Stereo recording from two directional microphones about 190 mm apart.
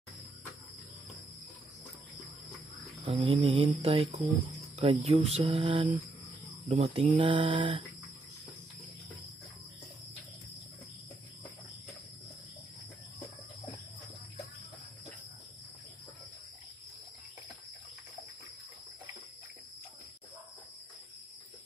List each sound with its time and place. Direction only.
3.0 s music: 30° right (ahead or behind)
6.7 s speech: 30° right (ahead or behind)